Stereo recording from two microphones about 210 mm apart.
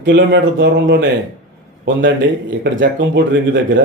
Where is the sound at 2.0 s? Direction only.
60° right (ahead or behind).